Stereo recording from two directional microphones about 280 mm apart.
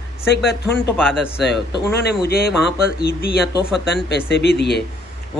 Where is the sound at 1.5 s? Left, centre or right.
Left.